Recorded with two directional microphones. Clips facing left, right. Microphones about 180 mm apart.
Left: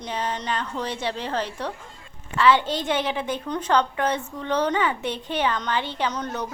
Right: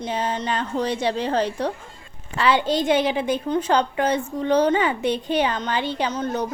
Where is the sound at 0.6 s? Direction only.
40° right (ahead or behind).